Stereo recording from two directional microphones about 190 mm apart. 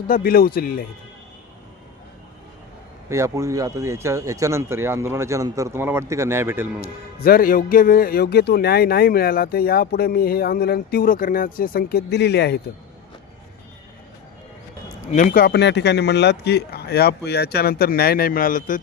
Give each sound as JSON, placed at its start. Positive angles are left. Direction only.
{"t": 0.1, "sound": "a man's voice", "side_deg": 50}
{"t": 3.1, "sound": "speech", "side_deg": -15}
{"t": 6.8, "sound": "a man's voice", "side_deg": 50}
{"t": 15.0, "sound": "a man's voice", "side_deg": 40}